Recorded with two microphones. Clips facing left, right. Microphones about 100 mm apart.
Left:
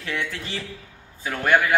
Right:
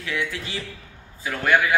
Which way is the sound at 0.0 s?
45° left (ahead or behind).